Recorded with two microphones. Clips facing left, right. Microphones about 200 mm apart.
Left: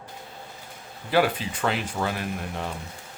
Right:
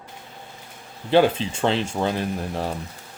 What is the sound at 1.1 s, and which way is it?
Speech, 25° right (ahead or behind).